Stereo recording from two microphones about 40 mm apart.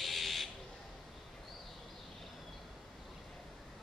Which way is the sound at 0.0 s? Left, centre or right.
Centre.